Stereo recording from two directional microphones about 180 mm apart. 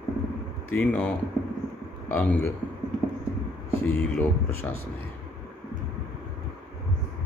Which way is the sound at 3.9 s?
10° left (ahead or behind).